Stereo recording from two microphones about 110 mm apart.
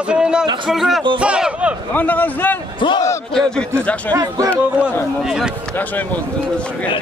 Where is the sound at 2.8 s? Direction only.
45° left (ahead or behind).